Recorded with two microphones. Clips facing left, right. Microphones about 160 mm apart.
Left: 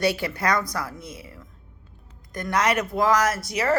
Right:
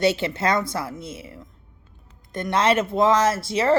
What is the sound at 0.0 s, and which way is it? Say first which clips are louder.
Speech: right 3 dB; 25° right (ahead or behind).